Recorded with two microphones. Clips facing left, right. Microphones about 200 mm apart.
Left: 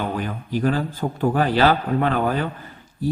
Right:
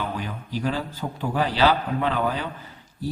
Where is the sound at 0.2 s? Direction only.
50° left (ahead or behind).